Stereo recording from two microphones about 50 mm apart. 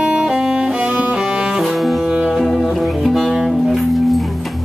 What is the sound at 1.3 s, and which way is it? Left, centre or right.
Cello, centre.